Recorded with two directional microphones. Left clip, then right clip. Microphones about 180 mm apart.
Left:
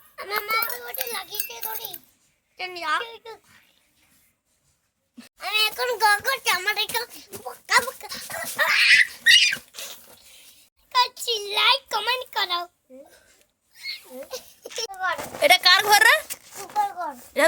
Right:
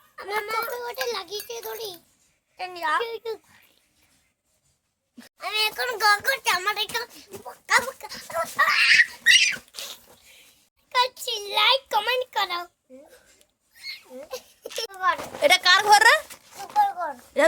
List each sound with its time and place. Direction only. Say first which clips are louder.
0.2 s a sound: left 2 dB; 5° right (ahead or behind)
0.8 s children playing: right 3 dB; 20° right (ahead or behind)
1.5 s a child's voice: right 2 dB; 20° right (ahead or behind)
3.0 s a child's voice: right 5 dB; 25° right (ahead or behind)
5.1 s speech: left 3 dB; 10° right (ahead or behind)
5.7 s a child's voice: left 1 dB; 25° right (ahead or behind)
9.7 s rodents: right 1 dB; centre (ahead or behind)
10.8 s a child's voice: left 2 dB; 20° right (ahead or behind)
13.7 s a sound: left 3 dB; 15° right (ahead or behind)
15.4 s speech: left 2 dB; 5° right (ahead or behind)